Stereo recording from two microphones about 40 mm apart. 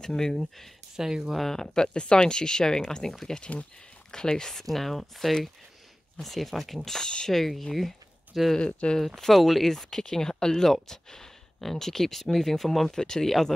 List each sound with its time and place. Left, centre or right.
0.0 s speech: centre
0.9 s speech: centre
1.3 s speech: centre
3.3 s speech: left
4.1 s speech: centre
4.6 s speech: centre
8.5 s speech: left
8.9 s speech: centre